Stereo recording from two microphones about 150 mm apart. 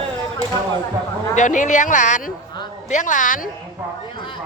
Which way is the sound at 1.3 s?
55° left (ahead or behind).